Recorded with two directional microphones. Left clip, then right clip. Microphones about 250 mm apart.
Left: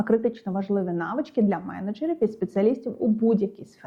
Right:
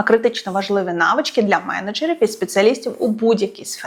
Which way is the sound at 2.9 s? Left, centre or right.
Right.